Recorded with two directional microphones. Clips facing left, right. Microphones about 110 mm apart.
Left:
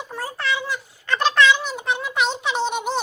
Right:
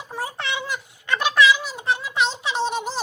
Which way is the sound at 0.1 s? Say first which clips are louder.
Left 2 dB; 15° right (ahead or behind).